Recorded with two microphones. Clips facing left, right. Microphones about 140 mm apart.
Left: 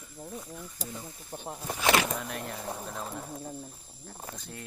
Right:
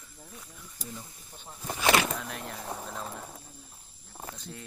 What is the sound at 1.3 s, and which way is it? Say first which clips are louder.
Speech: left 12 dB; 40° left (ahead or behind).